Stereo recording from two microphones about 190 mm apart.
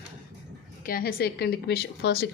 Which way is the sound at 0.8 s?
50° left (ahead or behind).